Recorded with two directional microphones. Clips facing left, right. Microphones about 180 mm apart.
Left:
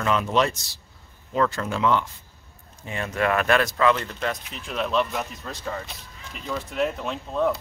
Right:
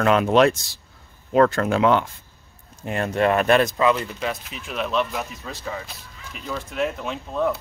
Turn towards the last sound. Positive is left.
turn(degrees=0)  # may be behind; listen again after turning